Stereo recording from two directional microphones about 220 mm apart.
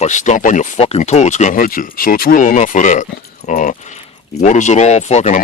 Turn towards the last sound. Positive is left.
turn(degrees=30)  # may be behind; listen again after turning